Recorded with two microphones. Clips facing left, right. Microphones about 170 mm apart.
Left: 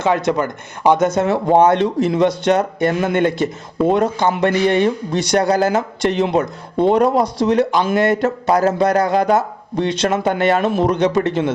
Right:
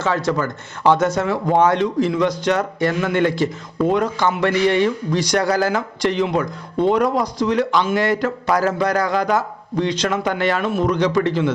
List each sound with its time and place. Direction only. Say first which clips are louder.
0.0 s speech: left 3 dB; 20° left (ahead or behind)
7.7 s speech: left 1 dB; 50° left (ahead or behind)
7.9 s speech: left 3 dB; 20° left (ahead or behind)